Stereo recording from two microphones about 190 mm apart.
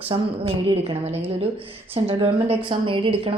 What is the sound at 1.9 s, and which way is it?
A woman's voice, 30° right (ahead or behind).